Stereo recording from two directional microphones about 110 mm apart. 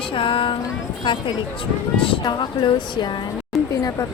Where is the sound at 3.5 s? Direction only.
Centre (ahead or behind).